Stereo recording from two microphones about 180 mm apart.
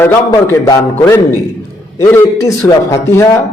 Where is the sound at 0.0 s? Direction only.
15° left (ahead or behind).